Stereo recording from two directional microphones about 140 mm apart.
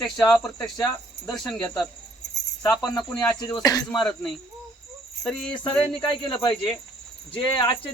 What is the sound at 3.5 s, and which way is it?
Speech, 25° left (ahead or behind).